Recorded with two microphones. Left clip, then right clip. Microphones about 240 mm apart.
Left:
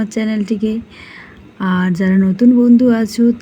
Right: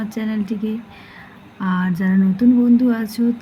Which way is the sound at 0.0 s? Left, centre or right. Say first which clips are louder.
Left 6 dB; centre.